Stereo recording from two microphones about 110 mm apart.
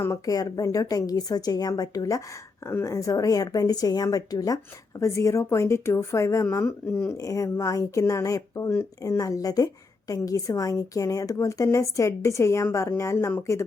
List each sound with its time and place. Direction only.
0.0 s speech: 30° left (ahead or behind)